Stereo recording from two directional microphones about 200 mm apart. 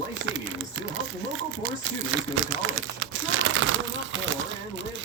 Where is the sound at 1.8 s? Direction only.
85° right.